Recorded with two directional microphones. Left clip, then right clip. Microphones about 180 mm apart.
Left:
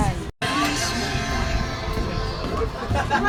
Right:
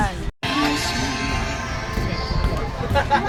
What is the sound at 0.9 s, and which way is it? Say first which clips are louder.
Music: right 2 dB; 5° left (ahead or behind).